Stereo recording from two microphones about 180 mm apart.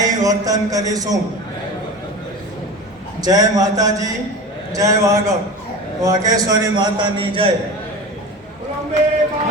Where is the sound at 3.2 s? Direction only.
20° right (ahead or behind).